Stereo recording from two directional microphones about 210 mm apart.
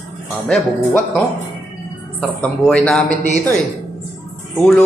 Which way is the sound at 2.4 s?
5° left (ahead or behind).